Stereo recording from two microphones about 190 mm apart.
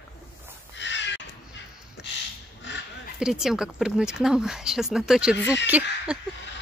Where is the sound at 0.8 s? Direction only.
70° left (ahead or behind).